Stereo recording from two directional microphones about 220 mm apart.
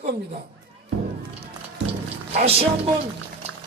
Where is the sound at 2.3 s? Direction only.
25° right (ahead or behind).